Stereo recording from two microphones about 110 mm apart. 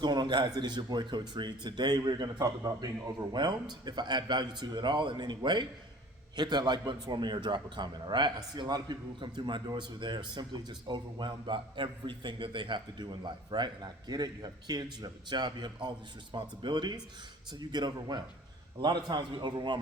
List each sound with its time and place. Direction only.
0.0 s a man's voice: 40° right (ahead or behind)